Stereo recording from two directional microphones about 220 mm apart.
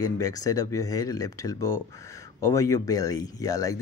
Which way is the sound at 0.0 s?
15° left (ahead or behind).